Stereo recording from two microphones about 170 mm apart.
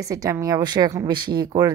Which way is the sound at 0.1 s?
20° right (ahead or behind).